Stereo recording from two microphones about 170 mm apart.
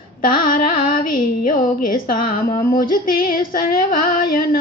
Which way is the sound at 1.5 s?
55° left (ahead or behind).